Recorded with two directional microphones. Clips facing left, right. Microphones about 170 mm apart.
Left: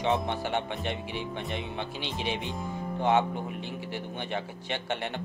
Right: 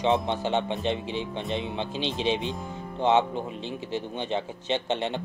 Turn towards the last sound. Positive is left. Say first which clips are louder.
# right 5 dB
turn(degrees=-20)  # may be behind; listen again after turning